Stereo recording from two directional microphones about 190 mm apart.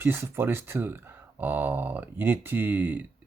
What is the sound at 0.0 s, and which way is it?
Speech, 10° right (ahead or behind).